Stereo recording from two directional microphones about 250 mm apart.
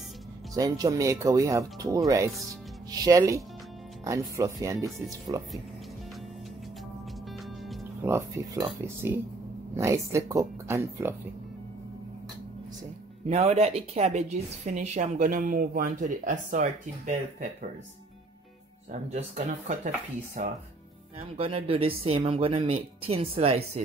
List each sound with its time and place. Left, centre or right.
0.6 s speech: centre
4.9 s speech: centre
7.7 s speech: centre
13.3 s speech: right
18.9 s speech: right